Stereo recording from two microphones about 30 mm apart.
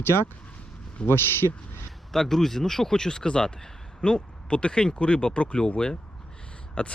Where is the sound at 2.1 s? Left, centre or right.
Centre.